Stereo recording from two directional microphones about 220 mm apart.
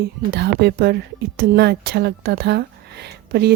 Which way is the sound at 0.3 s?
50° right (ahead or behind).